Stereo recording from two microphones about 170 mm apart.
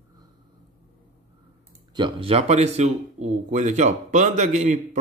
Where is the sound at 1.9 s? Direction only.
30° right (ahead or behind).